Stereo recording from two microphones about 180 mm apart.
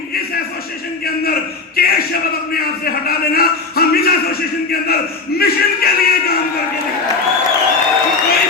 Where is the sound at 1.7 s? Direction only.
55° left (ahead or behind).